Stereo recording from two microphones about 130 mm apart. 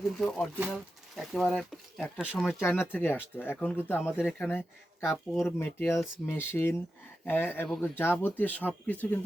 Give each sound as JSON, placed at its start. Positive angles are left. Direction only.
{"t": 0.1, "sound": "speech", "side_deg": 5}
{"t": 2.4, "sound": "speech", "side_deg": 20}